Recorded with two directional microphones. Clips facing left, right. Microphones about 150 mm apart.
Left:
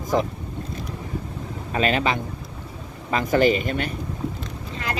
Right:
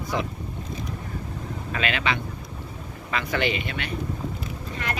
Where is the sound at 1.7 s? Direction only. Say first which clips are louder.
Left 5 dB; 40° left (ahead or behind).